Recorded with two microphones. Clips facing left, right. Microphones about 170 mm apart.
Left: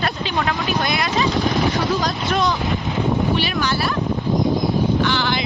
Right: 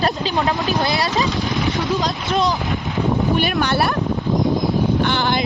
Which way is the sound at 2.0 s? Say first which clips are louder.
Right 1 dB; 25° right (ahead or behind).